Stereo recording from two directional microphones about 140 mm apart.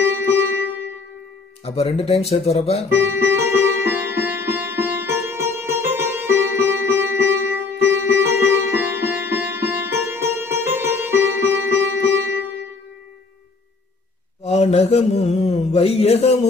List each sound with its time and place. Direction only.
0.0 s music: 15° right (ahead or behind)
1.6 s speech: 45° left (ahead or behind)
2.9 s music: 15° right (ahead or behind)
14.4 s mantra: 50° left (ahead or behind)